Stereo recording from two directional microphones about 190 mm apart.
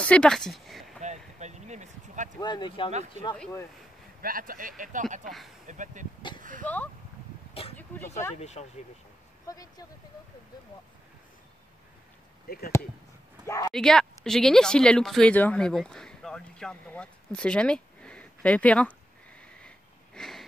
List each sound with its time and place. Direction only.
0.0 s a sound: 5° left (ahead or behind)
1.0 s a sound: 35° right (ahead or behind)
2.4 s speech: 25° left (ahead or behind)
3.2 s speech: 35° right (ahead or behind)
4.2 s speech: 50° right (ahead or behind)
6.6 s speech: 10° left (ahead or behind)
8.4 s speech: 35° left (ahead or behind)
9.5 s speech: 20° left (ahead or behind)
12.4 s speech: 55° left (ahead or behind)
13.7 s speech: 5° left (ahead or behind)
20.2 s a sound: centre (ahead or behind)